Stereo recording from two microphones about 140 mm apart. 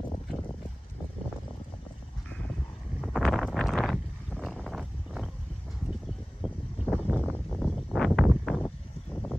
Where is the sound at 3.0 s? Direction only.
Centre (ahead or behind).